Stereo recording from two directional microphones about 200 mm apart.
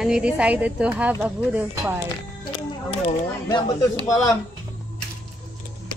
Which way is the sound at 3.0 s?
25° left (ahead or behind).